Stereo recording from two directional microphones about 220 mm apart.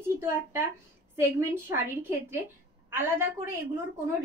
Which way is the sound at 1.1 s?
10° right (ahead or behind).